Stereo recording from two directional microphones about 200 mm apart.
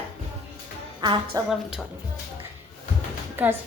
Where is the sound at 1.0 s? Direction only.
20° right (ahead or behind).